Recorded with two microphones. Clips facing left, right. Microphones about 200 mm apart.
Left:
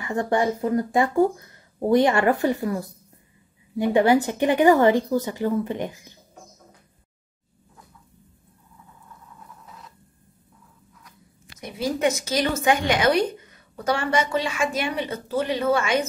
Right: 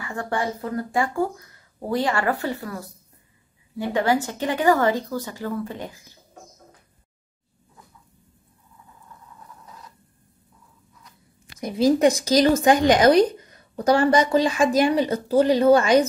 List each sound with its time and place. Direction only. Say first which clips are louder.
0.0 s a woman's voice: left 4 dB; 20° left (ahead or behind)
11.6 s a woman's voice: right 6 dB; 35° right (ahead or behind)